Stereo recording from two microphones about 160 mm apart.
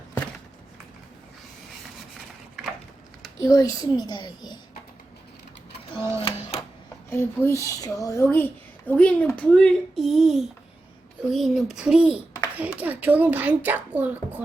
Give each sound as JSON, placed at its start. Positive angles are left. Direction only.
{"t": 3.4, "sound": "a child's voice", "side_deg": 20}
{"t": 6.1, "sound": "a sound", "side_deg": 35}
{"t": 7.1, "sound": "a child's voice", "side_deg": 15}